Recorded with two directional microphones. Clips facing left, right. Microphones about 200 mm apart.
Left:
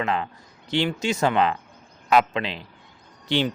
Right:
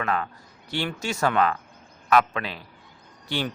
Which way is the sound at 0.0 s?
25° left (ahead or behind).